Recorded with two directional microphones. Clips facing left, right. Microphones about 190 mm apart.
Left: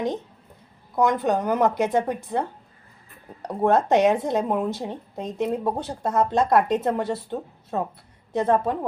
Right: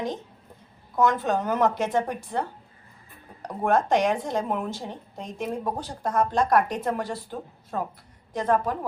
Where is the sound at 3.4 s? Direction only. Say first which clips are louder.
Left 3 dB; 20° left (ahead or behind).